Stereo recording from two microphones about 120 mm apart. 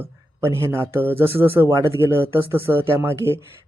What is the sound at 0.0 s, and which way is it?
Speech, 20° right (ahead or behind).